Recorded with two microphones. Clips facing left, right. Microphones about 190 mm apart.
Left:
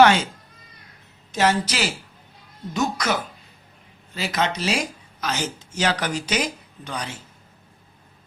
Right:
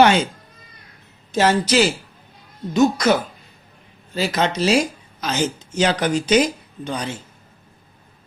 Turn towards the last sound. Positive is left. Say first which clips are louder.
# right 5 dB
turn(degrees=-25)  # may be behind; listen again after turning